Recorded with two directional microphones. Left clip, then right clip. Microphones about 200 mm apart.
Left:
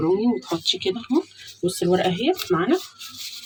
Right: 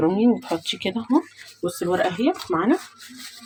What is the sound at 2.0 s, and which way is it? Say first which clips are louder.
Speech: left 1 dB; 45° right (ahead or behind).